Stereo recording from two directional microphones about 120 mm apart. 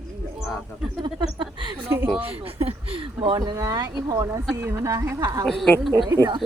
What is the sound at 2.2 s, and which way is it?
Speech, 55° right (ahead or behind).